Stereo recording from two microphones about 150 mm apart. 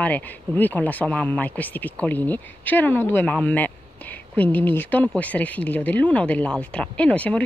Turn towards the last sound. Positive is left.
turn(degrees=10)  # may be behind; listen again after turning